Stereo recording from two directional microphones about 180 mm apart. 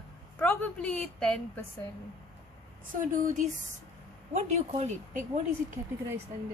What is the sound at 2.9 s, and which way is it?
A woman's voice, 45° right (ahead or behind).